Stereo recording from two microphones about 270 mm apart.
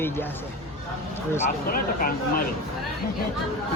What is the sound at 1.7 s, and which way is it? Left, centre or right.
Speech, left.